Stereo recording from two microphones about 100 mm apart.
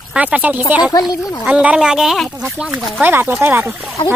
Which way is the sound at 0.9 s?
40° left (ahead or behind).